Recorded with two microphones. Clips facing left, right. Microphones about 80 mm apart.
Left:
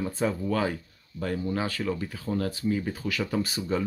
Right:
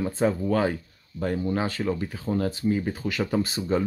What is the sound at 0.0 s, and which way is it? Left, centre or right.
Speech, right.